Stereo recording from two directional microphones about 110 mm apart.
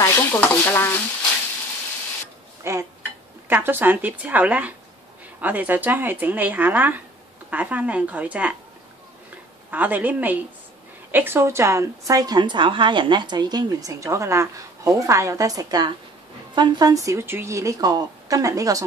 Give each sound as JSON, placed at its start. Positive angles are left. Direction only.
{"t": 0.0, "sound": "stir", "side_deg": 20}
{"t": 2.6, "sound": "speech", "side_deg": -25}
{"t": 9.7, "sound": "a woman's voice", "side_deg": -15}